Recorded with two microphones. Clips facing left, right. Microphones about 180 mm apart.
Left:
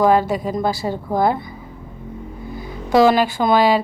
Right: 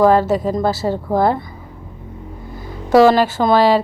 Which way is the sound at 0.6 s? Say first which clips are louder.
Right 3 dB; 15° left (ahead or behind).